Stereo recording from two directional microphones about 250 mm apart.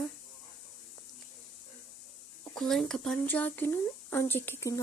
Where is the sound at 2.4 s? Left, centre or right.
Centre.